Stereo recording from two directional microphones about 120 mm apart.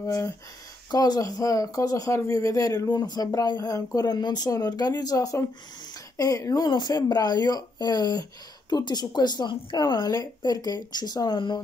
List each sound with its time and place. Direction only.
0.0 s speech: 30° left (ahead or behind)